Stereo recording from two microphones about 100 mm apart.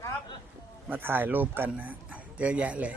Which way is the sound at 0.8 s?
20° right (ahead or behind).